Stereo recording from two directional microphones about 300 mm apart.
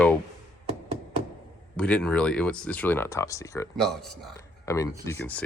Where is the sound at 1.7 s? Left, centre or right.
Centre.